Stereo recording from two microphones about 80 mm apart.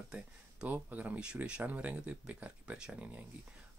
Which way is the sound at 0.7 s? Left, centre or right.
Right.